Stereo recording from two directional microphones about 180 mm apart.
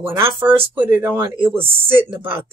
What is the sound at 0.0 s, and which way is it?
Speech, 15° right (ahead or behind).